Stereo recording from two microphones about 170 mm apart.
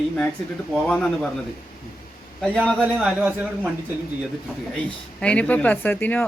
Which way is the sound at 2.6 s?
Centre (ahead or behind).